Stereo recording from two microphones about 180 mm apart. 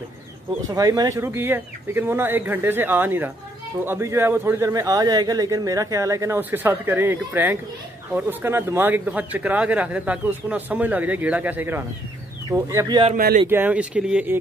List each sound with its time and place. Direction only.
0.7 s a man's voice: 20° right (ahead or behind)
13.1 s speech: 50° right (ahead or behind)
13.5 s a man's voice: 10° right (ahead or behind)